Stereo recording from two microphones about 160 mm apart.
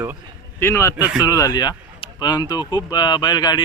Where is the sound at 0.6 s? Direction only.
15° left (ahead or behind).